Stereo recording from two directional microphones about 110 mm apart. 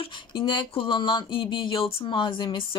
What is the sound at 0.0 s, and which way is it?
Speech, 50° left (ahead or behind).